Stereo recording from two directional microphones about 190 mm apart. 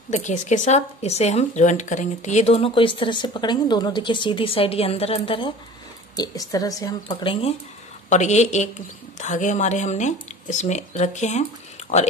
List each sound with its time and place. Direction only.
0.1 s a woman's voice: 40° left (ahead or behind)
8.1 s speech: 35° left (ahead or behind)